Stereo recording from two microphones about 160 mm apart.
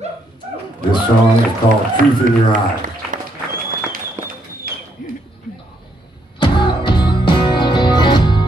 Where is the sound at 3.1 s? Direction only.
55° right (ahead or behind).